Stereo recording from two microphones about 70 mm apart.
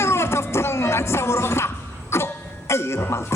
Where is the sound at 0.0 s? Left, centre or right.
Left.